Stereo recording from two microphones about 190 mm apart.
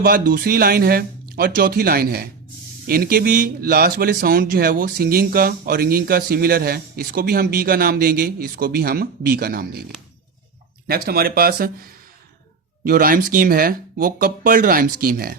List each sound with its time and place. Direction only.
0.0 s speech: 50° right (ahead or behind)
10.8 s speech: 50° right (ahead or behind)
12.8 s speech: 50° right (ahead or behind)